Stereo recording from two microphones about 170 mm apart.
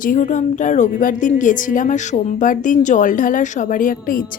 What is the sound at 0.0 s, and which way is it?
A woman's voice, 50° left (ahead or behind).